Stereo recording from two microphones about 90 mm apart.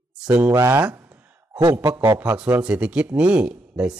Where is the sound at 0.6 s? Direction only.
25° right (ahead or behind).